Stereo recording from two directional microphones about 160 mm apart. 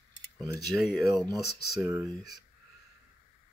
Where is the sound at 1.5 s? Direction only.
90° left.